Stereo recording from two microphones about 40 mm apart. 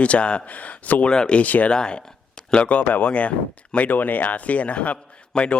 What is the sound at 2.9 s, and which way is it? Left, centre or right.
A man's voice, left.